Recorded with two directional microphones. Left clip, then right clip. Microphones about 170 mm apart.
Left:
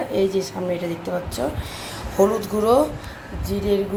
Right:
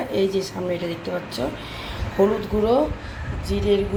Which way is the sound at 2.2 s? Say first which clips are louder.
Left 1 dB; 10° left (ahead or behind).